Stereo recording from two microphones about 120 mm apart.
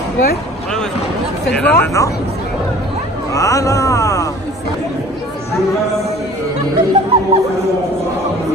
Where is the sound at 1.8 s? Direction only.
25° left (ahead or behind).